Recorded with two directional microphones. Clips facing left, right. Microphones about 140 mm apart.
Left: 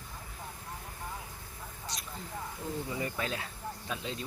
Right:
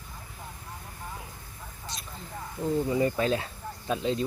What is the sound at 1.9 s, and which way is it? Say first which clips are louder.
Vehicle: right 2 dB; 25° right (ahead or behind).